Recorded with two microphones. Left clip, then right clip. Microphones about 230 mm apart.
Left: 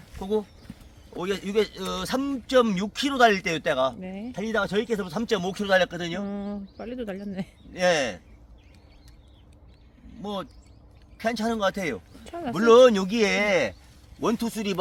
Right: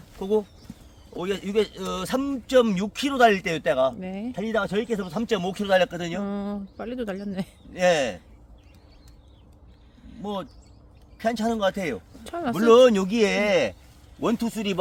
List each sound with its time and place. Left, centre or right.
0.2 s speech: right
0.7 s clip-clop: centre
1.1 s speech: centre
10.2 s speech: centre